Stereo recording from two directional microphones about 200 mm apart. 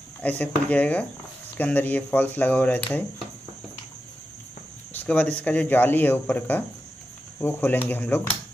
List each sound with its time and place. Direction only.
0.2 s speech: 5° left (ahead or behind)
4.9 s speech: 5° left (ahead or behind)